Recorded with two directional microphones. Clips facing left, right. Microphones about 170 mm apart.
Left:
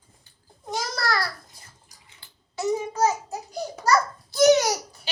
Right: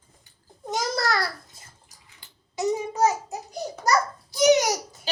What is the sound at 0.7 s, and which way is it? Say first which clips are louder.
Babbling: right 2 dB; 20° right (ahead or behind).